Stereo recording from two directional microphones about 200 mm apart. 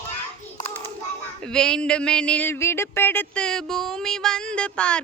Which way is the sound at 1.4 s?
5° left (ahead or behind).